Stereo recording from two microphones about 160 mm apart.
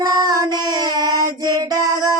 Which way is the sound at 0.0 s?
25° right (ahead or behind).